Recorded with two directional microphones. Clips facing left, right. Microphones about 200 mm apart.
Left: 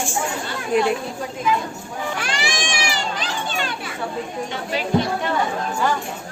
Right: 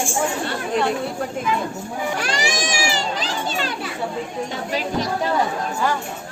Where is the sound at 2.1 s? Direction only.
40° right (ahead or behind).